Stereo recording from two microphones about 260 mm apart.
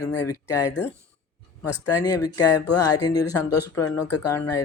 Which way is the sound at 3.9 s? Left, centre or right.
Left.